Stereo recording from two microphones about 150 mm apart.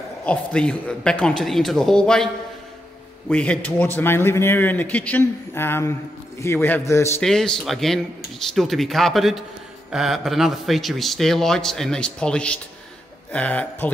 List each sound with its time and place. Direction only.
0.2 s speech: 10° left (ahead or behind)
3.3 s a man's voice: 10° left (ahead or behind)
7.2 s a man's voice: 5° left (ahead or behind)